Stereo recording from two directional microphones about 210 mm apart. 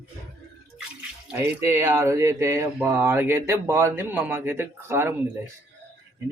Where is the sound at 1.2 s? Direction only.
10° right (ahead or behind).